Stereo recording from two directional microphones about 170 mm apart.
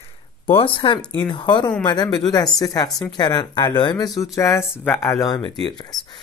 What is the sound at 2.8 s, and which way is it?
Speech, 5° left (ahead or behind).